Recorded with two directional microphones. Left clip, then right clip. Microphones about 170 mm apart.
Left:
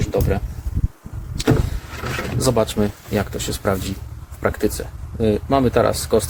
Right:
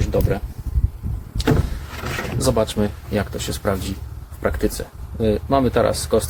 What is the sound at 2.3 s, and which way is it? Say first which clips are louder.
Speech: left 1 dB; 25° left (ahead or behind).